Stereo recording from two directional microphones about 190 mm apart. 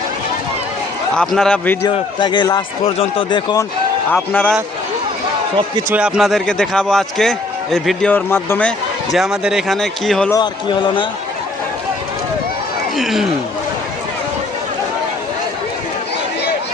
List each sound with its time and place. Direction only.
1.1 s a man's voice: 5° left (ahead or behind)
1.9 s speech: 25° left (ahead or behind)
4.1 s a man's voice: 10° left (ahead or behind)
5.9 s a man's voice: 5° right (ahead or behind)
9.1 s a man's voice: centre (ahead or behind)
10.3 s speech: 25° left (ahead or behind)
13.0 s a man's voice: centre (ahead or behind)